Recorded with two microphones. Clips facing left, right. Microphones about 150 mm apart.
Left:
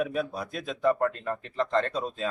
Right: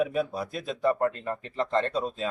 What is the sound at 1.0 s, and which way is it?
Speech, 25° right (ahead or behind).